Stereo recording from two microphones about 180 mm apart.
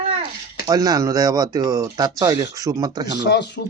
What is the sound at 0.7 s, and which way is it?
Speech, 20° right (ahead or behind).